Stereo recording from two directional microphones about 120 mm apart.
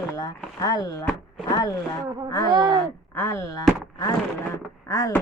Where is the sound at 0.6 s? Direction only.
30° left (ahead or behind).